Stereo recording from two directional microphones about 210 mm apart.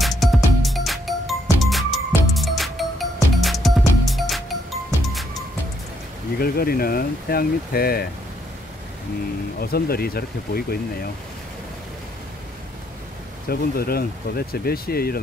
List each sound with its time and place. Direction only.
0.0 s music: centre (ahead or behind)
6.3 s speech: 45° left (ahead or behind)
9.6 s speech: 45° left (ahead or behind)
13.5 s speech: 45° left (ahead or behind)